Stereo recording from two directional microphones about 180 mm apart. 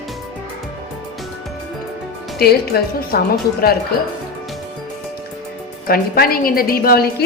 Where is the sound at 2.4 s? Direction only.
60° left (ahead or behind).